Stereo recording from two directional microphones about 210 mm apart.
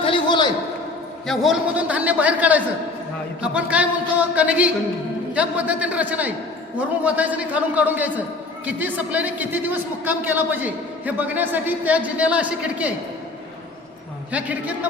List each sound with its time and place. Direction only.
0.0 s a sound: 20° left (ahead or behind)
1.3 s a man's voice: centre (ahead or behind)
14.3 s a man's voice: 5° right (ahead or behind)